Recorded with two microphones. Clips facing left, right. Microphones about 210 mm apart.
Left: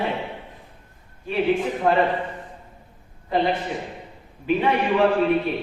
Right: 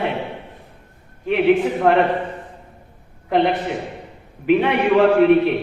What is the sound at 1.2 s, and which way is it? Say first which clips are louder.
Speech: right 6 dB; 70° right (ahead or behind).